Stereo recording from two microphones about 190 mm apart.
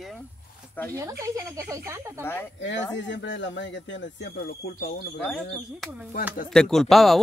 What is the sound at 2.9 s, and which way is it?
Speech, 70° left (ahead or behind).